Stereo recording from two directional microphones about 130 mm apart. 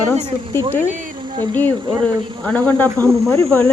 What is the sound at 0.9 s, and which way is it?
Speech, 75° right (ahead or behind).